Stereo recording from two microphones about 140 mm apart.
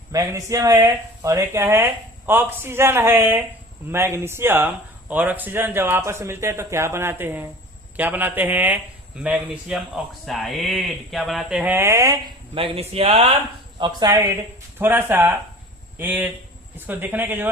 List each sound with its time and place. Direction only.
0.1 s a man's voice: 25° right (ahead or behind)
12.5 s speech: 40° right (ahead or behind)
13.7 s speech: 35° right (ahead or behind)
14.1 s a man's voice: 20° right (ahead or behind)